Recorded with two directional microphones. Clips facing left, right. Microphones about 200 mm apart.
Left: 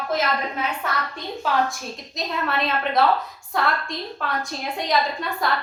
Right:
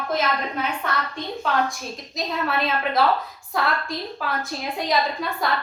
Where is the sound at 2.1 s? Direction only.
Centre (ahead or behind).